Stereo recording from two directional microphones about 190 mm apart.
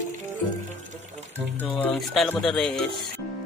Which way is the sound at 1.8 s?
Centre (ahead or behind).